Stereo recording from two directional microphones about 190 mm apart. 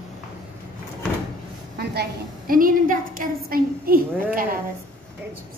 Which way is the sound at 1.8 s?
60° right (ahead or behind).